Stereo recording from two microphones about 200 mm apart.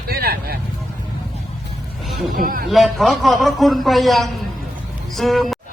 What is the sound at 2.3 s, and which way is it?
Speech, 45° right (ahead or behind).